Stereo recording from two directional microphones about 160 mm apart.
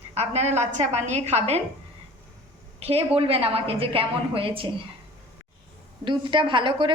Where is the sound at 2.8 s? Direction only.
40° right (ahead or behind).